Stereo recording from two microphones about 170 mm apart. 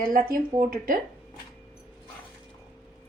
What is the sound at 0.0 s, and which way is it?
Speech, 55° right (ahead or behind).